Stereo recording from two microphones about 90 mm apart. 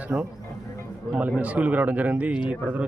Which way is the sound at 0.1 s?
35° right (ahead or behind).